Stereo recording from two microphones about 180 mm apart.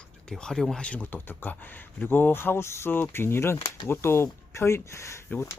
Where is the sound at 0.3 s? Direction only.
5° left (ahead or behind).